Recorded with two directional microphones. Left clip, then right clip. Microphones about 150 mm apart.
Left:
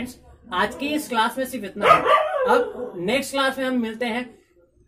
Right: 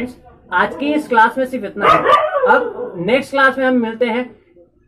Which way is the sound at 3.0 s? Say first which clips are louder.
Right 9 dB; 10° left (ahead or behind).